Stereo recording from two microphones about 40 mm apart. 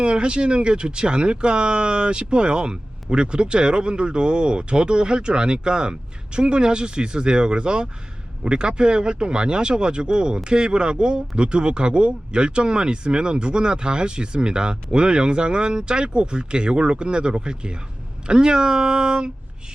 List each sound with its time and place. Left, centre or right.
0.0 s speech: right